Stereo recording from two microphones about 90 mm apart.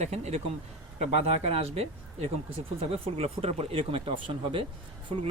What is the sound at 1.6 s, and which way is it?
Speech, 90° right.